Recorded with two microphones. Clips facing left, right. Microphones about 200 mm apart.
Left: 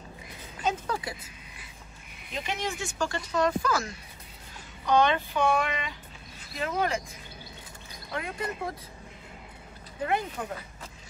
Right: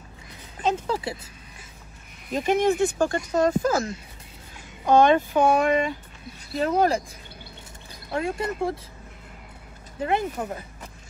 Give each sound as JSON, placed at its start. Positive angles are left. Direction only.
{"t": 0.6, "sound": "speech", "side_deg": -30}
{"t": 2.3, "sound": "speech", "side_deg": -50}
{"t": 4.8, "sound": "speech", "side_deg": -50}
{"t": 8.1, "sound": "speech", "side_deg": -30}
{"t": 10.0, "sound": "speech", "side_deg": -25}